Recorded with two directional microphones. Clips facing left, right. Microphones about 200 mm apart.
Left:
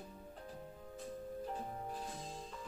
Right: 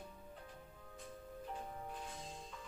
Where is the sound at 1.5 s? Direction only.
35° left (ahead or behind).